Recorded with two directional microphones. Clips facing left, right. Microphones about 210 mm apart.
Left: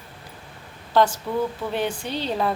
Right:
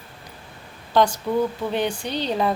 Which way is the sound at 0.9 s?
5° left (ahead or behind).